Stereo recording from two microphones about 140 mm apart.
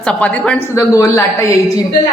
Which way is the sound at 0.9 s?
25° left (ahead or behind).